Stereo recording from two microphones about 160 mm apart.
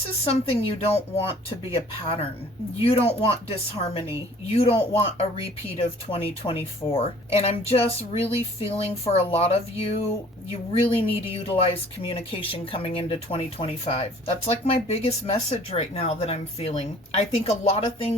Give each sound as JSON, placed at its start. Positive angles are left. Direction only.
{"t": 0.3, "sound": "speech", "side_deg": 35}
{"t": 2.8, "sound": "speech", "side_deg": 35}